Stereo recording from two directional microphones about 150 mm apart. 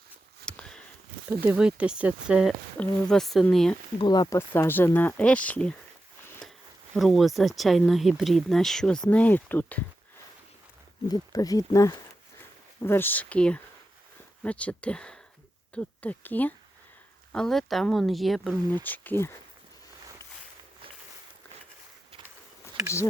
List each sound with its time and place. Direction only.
0.4 s a sound: 5° left (ahead or behind)
1.3 s speech: 15° right (ahead or behind)
2.7 s speech: 5° left (ahead or behind)
3.9 s speech: 30° left (ahead or behind)
4.4 s speech: 15° left (ahead or behind)
6.4 s a sound: 5° left (ahead or behind)
6.9 s speech: centre (ahead or behind)
11.1 s speech: 25° left (ahead or behind)